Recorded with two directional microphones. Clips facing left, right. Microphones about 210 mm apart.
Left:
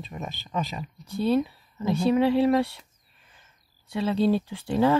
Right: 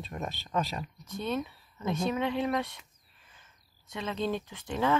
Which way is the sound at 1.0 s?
30° left (ahead or behind).